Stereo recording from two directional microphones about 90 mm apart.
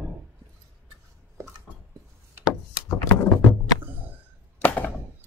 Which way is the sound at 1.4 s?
30° right (ahead or behind).